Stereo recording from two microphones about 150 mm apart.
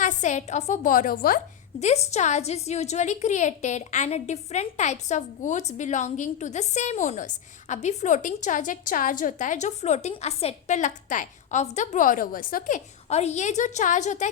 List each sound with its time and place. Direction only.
0.0 s a woman's voice: 55° left (ahead or behind); by 1.4 s 70° left (ahead or behind)
1.8 s a woman's voice: 45° left (ahead or behind)